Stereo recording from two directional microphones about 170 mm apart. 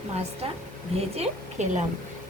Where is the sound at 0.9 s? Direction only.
40° right (ahead or behind).